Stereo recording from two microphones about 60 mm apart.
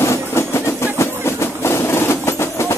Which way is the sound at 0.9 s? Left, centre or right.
Left.